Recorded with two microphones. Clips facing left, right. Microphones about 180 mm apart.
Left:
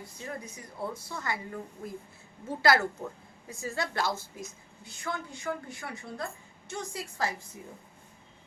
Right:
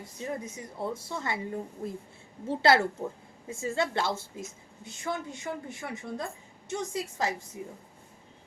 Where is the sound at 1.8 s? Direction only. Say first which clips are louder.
Right 4 dB; 35° right (ahead or behind); by 7.3 s 20° right (ahead or behind).